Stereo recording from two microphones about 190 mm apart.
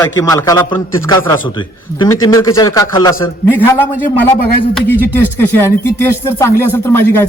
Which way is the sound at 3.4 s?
10° left (ahead or behind).